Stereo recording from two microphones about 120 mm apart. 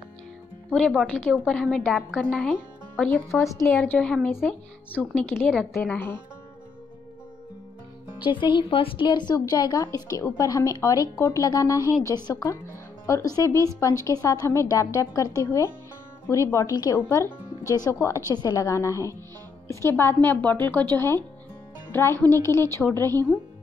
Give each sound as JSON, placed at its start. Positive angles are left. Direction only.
{"t": 0.7, "sound": "speech", "side_deg": 0}
{"t": 8.2, "sound": "a woman's voice", "side_deg": 40}